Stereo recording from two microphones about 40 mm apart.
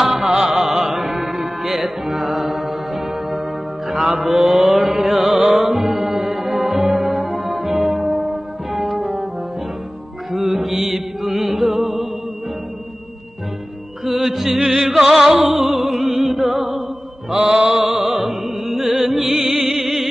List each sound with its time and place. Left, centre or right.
0.0 s music: centre
3.9 s mantra: centre
4.9 s music: centre
8.7 s brass instrument: centre
10.3 s music: centre
14.0 s music: centre
17.3 s mantra: centre
18.0 s music: centre